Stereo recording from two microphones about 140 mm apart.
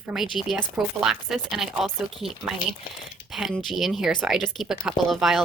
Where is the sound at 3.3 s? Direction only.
Centre (ahead or behind).